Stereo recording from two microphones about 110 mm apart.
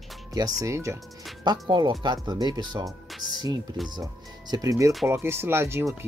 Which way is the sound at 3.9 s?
35° right (ahead or behind).